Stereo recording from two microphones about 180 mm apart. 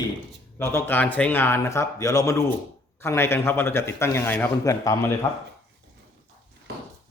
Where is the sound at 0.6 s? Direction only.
15° left (ahead or behind).